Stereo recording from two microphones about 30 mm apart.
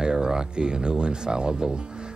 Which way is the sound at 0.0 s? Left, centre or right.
Right.